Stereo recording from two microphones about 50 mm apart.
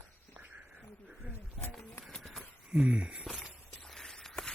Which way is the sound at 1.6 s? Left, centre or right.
Centre.